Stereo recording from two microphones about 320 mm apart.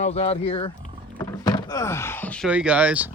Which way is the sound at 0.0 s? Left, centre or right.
Centre.